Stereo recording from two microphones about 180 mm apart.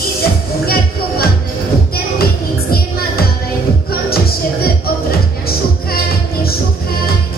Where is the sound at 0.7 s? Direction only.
55° left (ahead or behind).